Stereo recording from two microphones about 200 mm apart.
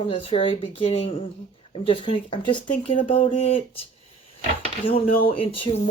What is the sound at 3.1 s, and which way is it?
Speech, 25° left (ahead or behind).